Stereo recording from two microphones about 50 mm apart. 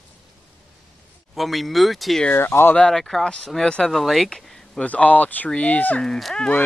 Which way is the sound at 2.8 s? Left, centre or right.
Centre.